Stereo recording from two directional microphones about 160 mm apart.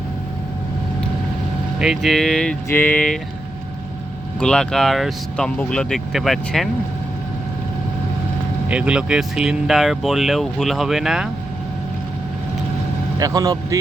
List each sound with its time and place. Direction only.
1.8 s speech: centre (ahead or behind)
4.4 s speech: 5° left (ahead or behind)
8.7 s speech: 5° right (ahead or behind)
13.1 s a man's voice: 25° right (ahead or behind)